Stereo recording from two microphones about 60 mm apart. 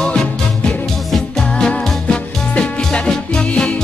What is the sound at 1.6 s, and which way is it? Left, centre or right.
Music, centre.